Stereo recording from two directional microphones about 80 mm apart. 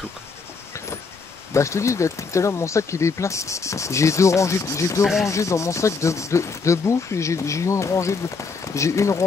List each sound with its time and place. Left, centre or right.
1.5 s speech: left